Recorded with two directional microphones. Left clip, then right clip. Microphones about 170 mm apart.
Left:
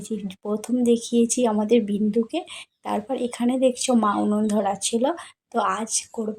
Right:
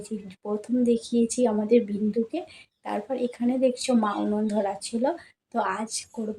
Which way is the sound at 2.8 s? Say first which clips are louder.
Left 2 dB; 25° left (ahead or behind).